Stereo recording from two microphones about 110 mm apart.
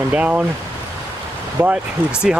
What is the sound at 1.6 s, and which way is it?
Speech, 15° right (ahead or behind).